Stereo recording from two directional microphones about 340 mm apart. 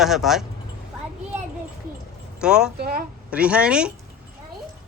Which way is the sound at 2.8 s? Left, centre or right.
Right.